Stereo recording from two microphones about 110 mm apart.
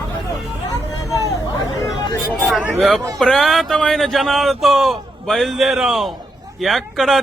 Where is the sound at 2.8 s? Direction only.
Centre (ahead or behind).